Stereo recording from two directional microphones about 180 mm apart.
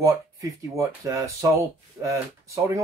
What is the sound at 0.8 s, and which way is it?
Speech, 15° right (ahead or behind).